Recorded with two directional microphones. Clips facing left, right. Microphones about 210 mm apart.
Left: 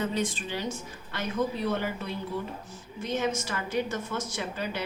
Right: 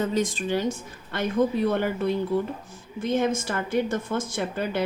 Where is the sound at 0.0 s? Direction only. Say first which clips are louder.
Right 5 dB; 45° right (ahead or behind).